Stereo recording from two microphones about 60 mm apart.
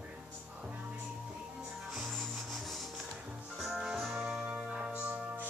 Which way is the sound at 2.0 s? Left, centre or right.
Centre.